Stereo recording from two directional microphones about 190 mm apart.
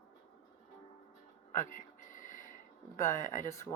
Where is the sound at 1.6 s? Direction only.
40° left (ahead or behind).